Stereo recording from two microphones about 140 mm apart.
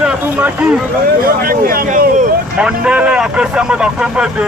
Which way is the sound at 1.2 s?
90° right.